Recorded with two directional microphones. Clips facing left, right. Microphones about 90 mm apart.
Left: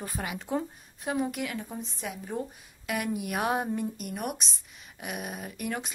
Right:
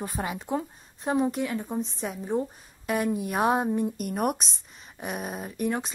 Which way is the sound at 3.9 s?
45° right (ahead or behind).